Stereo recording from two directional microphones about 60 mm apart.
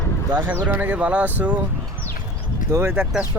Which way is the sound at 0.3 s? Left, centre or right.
Right.